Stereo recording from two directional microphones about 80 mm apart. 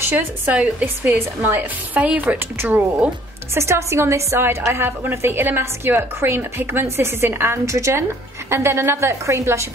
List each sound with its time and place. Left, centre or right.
0.5 s a woman's voice: centre
2.0 s a woman's voice: centre
2.2 s a woman's voice: right